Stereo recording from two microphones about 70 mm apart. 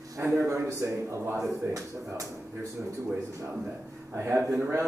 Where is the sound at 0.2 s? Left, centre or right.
Right.